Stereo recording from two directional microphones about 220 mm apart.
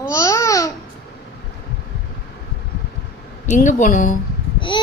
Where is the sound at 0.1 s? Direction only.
15° left (ahead or behind).